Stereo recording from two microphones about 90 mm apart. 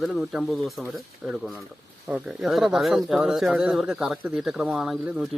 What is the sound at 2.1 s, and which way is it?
Speech, 5° right (ahead or behind).